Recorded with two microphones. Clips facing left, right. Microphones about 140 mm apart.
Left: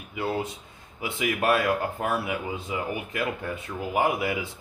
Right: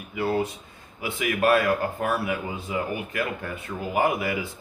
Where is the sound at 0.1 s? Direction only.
20° left (ahead or behind).